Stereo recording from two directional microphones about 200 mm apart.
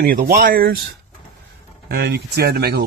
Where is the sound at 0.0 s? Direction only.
45° right (ahead or behind).